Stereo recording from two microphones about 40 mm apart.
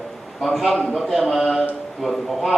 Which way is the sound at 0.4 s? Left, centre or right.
Centre.